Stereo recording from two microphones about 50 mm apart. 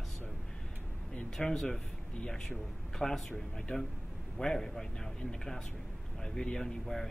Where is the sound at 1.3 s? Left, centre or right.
Centre.